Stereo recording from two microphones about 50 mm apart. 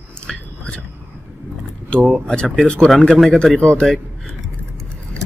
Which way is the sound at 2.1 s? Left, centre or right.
Centre.